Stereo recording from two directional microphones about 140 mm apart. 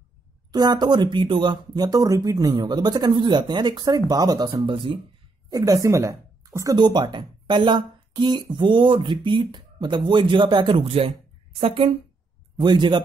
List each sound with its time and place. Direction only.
0.5 s speech: 30° right (ahead or behind)
5.5 s speech: 25° right (ahead or behind)